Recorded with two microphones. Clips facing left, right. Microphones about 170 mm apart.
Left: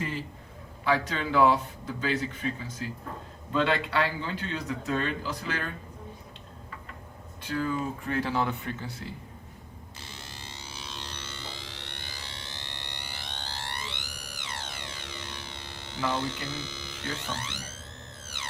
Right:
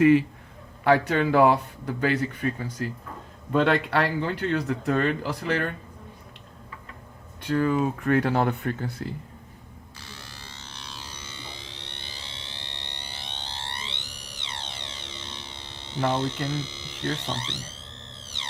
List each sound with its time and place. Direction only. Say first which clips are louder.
0.0 s speech: right 17 dB; 65° right (ahead or behind)
7.4 s speech: right 7 dB; 60° right (ahead or behind)
10.0 s a sound: even; 20° left (ahead or behind); by 16.0 s 20° right (ahead or behind)
16.0 s speech: right 4 dB; 20° right (ahead or behind)
16.6 s a sound: even; 25° right (ahead or behind)
17.0 s speech: right 6 dB; 70° right (ahead or behind)